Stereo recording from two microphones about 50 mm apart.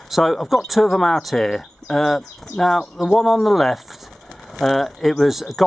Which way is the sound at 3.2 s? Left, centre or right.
Centre.